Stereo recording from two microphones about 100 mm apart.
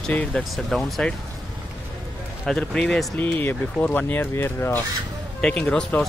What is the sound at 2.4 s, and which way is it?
Speech, 5° left (ahead or behind).